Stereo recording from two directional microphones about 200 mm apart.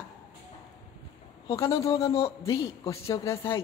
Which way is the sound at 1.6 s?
15° left (ahead or behind).